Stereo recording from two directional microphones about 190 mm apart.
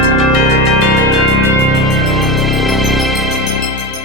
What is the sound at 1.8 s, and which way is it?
Music, centre (ahead or behind).